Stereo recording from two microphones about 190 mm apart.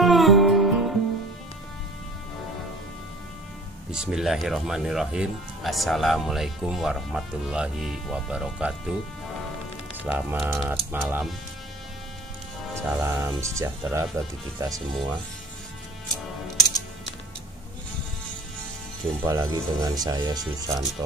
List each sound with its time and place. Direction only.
0.0 s music: centre (ahead or behind)
3.9 s speech: 5° right (ahead or behind)
10.0 s speech: 5° right (ahead or behind)
12.7 s speech: 15° right (ahead or behind)
19.2 s speech: 15° right (ahead or behind)